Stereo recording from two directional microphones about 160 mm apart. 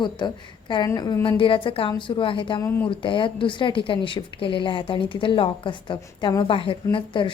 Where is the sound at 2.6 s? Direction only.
15° left (ahead or behind).